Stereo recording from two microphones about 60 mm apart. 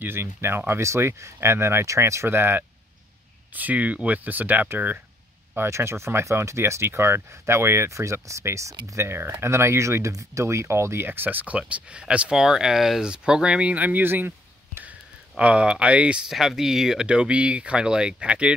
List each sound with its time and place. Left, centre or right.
0.0 s speech: right
2.2 s speech: right
3.5 s speech: right
5.6 s speech: right
9.0 s speech: right
11.1 s speech: right
14.9 s speech: centre
16.3 s speech: centre